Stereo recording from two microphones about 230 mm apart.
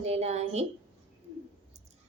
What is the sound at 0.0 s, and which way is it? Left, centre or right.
Speech, right.